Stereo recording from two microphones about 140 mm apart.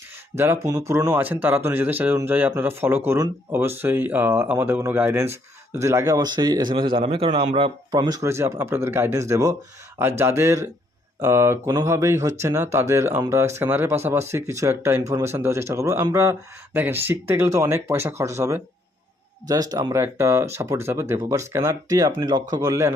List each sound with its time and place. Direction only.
0.3 s speech: 20° right (ahead or behind); by 7.9 s 40° right (ahead or behind)
7.9 s speech: 20° right (ahead or behind)